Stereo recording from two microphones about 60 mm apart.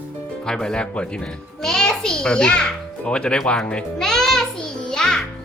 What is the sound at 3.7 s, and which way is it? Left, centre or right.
Music, centre.